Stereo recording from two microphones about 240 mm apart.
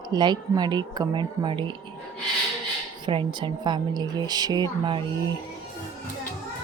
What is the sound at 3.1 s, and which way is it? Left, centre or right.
A woman's voice, right.